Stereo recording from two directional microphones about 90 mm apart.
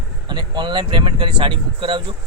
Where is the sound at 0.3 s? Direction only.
55° right (ahead or behind).